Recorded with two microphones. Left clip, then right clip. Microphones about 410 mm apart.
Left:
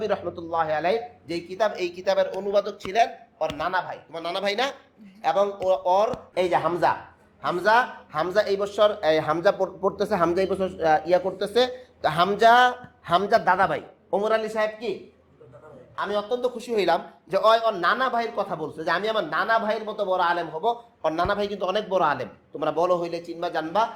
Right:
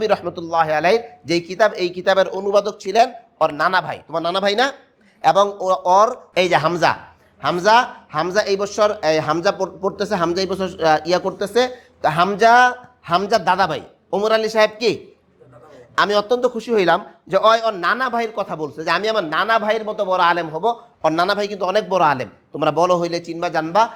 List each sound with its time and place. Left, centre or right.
0.0 s a man's voice: right
16.0 s speech: right
16.6 s a man's voice: right
17.3 s a man's voice: right